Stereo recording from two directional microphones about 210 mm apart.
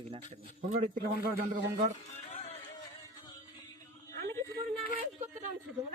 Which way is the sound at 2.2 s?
30° left (ahead or behind).